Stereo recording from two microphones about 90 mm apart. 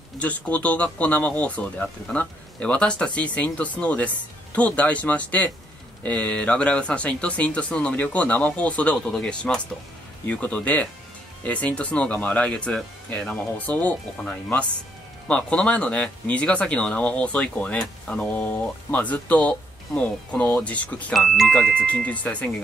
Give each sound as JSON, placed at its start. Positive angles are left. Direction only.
{"t": 0.2, "sound": "speech", "side_deg": 15}
{"t": 21.1, "sound": "speech", "side_deg": 5}
{"t": 21.8, "sound": "speech", "side_deg": 15}